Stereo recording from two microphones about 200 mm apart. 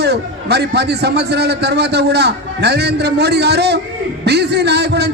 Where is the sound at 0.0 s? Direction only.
55° right (ahead or behind).